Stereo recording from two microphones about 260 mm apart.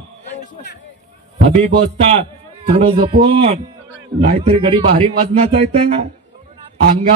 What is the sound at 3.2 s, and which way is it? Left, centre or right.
A man's voice, right.